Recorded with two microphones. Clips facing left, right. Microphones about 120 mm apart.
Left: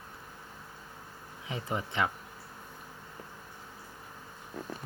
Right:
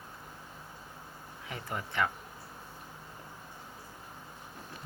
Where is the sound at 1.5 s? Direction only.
20° left (ahead or behind).